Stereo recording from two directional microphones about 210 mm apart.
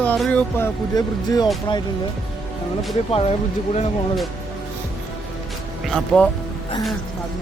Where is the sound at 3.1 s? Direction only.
30° left (ahead or behind).